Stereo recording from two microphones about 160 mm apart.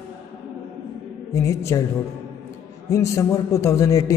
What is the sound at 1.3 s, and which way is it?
Speech, 20° left (ahead or behind).